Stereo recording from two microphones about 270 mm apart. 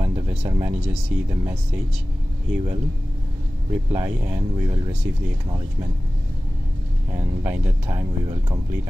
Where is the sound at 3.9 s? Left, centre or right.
Centre.